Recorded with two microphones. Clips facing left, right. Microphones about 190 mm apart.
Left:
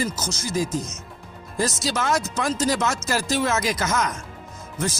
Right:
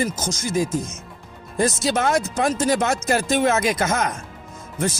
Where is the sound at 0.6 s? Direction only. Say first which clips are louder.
Right 2 dB; 55° right (ahead or behind).